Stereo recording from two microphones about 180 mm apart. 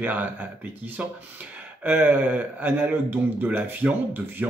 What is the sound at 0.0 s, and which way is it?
Speech, 10° right (ahead or behind).